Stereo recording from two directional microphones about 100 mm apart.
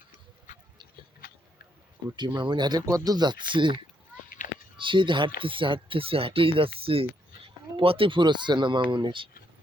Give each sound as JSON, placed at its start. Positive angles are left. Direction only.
{"t": 2.1, "sound": "speech", "side_deg": -50}
{"t": 4.8, "sound": "speech", "side_deg": -55}